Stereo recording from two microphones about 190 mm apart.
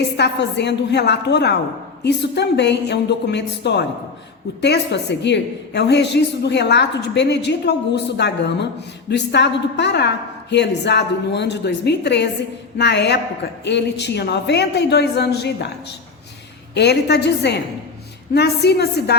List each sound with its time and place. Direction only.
0.2 s a woman's voice: 65° left (ahead or behind)
16.7 s a woman's voice: 60° left (ahead or behind)